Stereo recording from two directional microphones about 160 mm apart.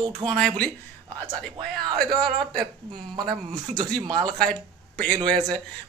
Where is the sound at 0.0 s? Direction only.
30° right (ahead or behind).